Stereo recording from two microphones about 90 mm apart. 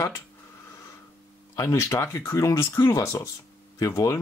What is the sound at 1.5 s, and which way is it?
Speech, 30° left (ahead or behind).